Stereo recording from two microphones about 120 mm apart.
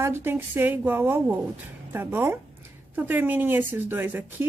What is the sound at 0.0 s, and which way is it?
Speech, 20° right (ahead or behind).